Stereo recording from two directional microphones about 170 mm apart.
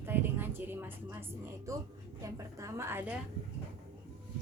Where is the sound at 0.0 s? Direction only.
10° right (ahead or behind).